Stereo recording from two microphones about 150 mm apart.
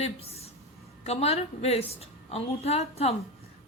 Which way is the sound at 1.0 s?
45° left (ahead or behind).